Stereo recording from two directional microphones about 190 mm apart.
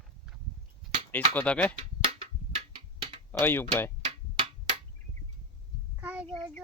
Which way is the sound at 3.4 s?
10° left (ahead or behind).